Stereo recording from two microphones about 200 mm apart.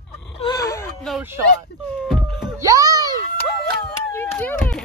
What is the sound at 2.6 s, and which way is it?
Music, 15° right (ahead or behind).